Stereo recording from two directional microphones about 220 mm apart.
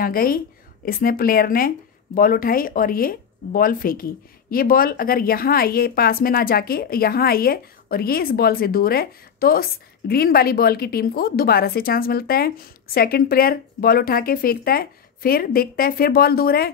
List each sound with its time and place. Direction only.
0.0 s speech: 40° left (ahead or behind)